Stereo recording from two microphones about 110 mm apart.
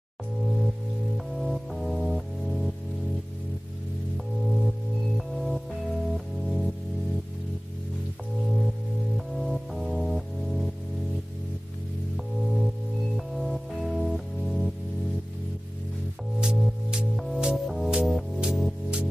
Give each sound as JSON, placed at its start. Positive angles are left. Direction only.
{"t": 1.1, "sound": "music", "side_deg": 0}
{"t": 4.5, "sound": "music", "side_deg": 0}
{"t": 9.1, "sound": "music", "side_deg": 0}
{"t": 12.5, "sound": "music", "side_deg": 0}
{"t": 16.3, "sound": "music", "side_deg": -5}